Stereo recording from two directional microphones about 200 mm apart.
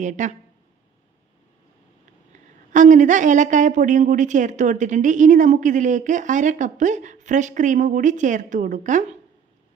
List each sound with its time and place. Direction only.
0.0 s a woman's voice: 35° right (ahead or behind)
2.7 s a woman's voice: 40° right (ahead or behind)